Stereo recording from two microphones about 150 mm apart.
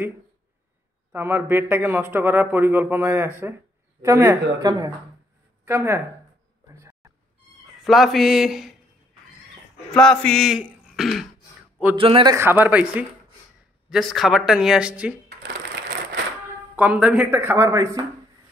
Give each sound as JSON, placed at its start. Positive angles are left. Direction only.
{"t": 1.1, "sound": "a woman's voice", "side_deg": -15}
{"t": 6.8, "sound": "a sound", "side_deg": -20}
{"t": 7.8, "sound": "speech", "side_deg": 0}
{"t": 9.8, "sound": "speech", "side_deg": 5}
{"t": 12.0, "sound": "a man's voice", "side_deg": -35}
{"t": 12.4, "sound": "speech", "side_deg": -15}
{"t": 16.7, "sound": "speech", "side_deg": -10}